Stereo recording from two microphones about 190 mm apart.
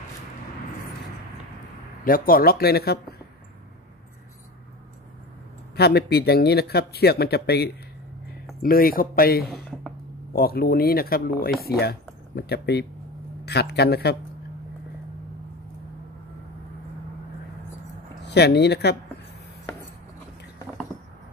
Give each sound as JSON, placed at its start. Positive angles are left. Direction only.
{"t": 2.0, "sound": "speech", "side_deg": 50}
{"t": 5.8, "sound": "speech", "side_deg": 55}
{"t": 9.5, "sound": "a sound", "side_deg": 0}
{"t": 10.3, "sound": "speech", "side_deg": 50}
{"t": 18.2, "sound": "speech", "side_deg": 60}